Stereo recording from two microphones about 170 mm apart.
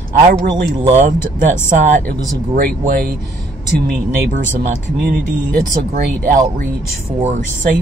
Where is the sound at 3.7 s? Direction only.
65° right (ahead or behind).